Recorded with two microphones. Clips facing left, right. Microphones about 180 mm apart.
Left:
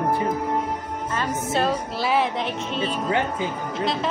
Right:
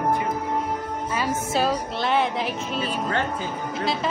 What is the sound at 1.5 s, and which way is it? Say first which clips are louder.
Music: left 2 dB; centre (ahead or behind).